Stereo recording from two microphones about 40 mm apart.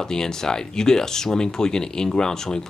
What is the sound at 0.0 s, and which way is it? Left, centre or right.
Speech, centre.